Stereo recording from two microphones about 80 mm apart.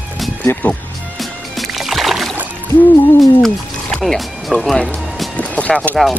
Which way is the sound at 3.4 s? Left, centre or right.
Centre.